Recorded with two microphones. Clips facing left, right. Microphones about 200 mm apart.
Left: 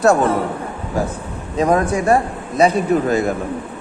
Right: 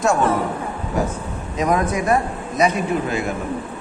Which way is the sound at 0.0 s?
35° left (ahead or behind).